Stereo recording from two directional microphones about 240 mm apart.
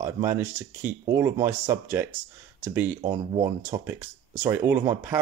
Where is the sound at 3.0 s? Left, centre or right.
Right.